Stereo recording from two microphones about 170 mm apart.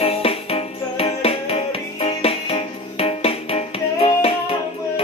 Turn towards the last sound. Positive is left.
turn(degrees=35)  # may be behind; listen again after turning